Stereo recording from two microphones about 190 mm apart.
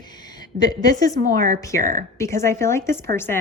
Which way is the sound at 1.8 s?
40° right (ahead or behind).